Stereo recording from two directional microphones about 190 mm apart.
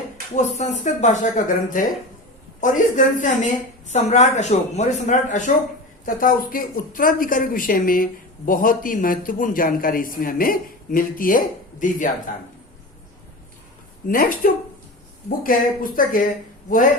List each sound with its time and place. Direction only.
0.3 s a woman's voice: 40° left (ahead or behind)
14.1 s a woman's voice: 45° left (ahead or behind)